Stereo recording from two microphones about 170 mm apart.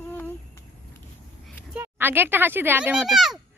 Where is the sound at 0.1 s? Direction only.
15° left (ahead or behind).